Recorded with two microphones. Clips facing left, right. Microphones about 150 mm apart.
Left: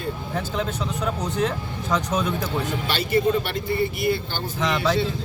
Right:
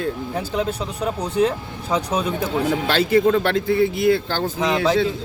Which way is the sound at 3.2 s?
90° right.